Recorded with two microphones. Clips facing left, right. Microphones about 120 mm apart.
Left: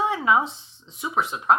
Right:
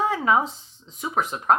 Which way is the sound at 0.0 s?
40° right (ahead or behind).